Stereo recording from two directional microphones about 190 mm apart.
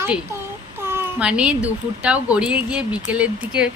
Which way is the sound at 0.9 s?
10° right (ahead or behind).